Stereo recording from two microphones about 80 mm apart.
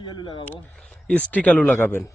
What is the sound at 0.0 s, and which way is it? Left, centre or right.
Speech, left.